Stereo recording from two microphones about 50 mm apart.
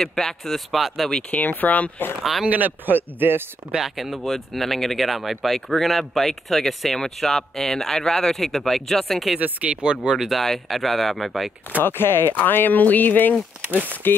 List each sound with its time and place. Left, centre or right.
0.0 s speech: centre
1.3 s speech: left
2.4 s a man's voice: right
3.7 s speech: centre
9.4 s speech: right
10.1 s speech: centre
10.4 s speech: centre
11.8 s speech: left
12.4 s speech: left
13.6 s a man's voice: right